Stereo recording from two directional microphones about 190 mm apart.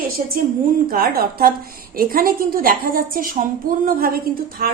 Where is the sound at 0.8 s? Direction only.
50° right (ahead or behind).